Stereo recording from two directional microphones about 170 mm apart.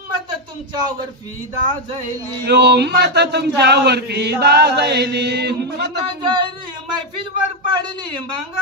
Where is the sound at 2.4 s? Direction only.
75° right (ahead or behind).